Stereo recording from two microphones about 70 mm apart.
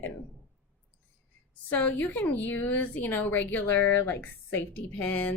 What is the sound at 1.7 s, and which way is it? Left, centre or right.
A woman's voice, left.